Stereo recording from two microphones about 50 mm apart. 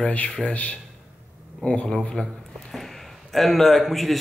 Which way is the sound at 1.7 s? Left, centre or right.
Centre.